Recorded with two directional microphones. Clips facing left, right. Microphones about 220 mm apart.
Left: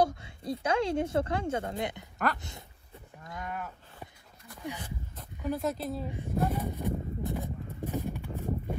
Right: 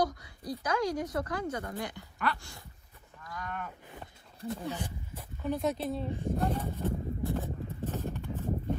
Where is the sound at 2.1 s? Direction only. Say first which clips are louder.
Left 2 dB; 40° left (ahead or behind).